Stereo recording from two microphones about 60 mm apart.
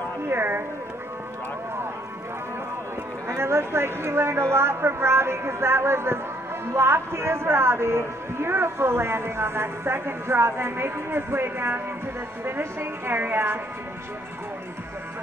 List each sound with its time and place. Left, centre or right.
0.3 s a woman's voice: right
3.3 s a man's voice: right